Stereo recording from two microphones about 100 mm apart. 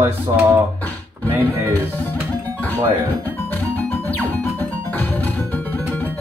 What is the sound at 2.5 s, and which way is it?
Music, 20° left (ahead or behind).